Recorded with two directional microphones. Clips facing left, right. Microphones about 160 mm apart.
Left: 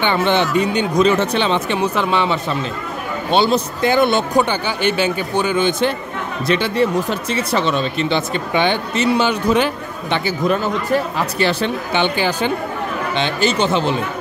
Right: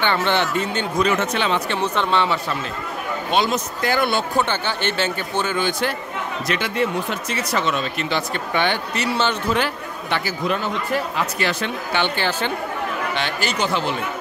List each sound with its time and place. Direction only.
0.0 s speech: 15° left (ahead or behind)
1.0 s speech: 30° left (ahead or behind)
1.7 s speech: 10° left (ahead or behind)
3.3 s speech: 30° left (ahead or behind)
3.9 s speech: 20° left (ahead or behind)
10.4 s speech: 40° left (ahead or behind)
12.0 s speech: 15° left (ahead or behind)